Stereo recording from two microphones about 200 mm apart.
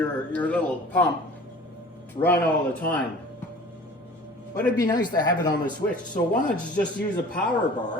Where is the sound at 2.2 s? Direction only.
10° left (ahead or behind).